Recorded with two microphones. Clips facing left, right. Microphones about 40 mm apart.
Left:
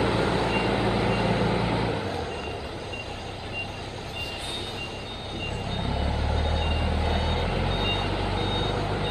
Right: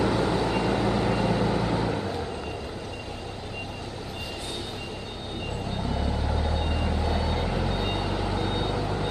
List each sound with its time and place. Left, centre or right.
0.0 s vehicle: left
5.8 s vehicle: centre
8.1 s reversing beeps: left